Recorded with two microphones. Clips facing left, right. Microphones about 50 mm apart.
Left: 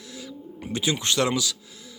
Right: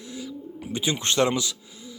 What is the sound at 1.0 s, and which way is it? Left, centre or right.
Speech, right.